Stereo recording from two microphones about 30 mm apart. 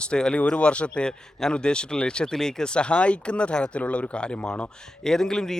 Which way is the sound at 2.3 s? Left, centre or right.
Centre.